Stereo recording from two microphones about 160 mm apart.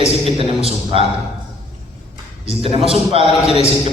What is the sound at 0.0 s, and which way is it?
Speech, 40° right (ahead or behind).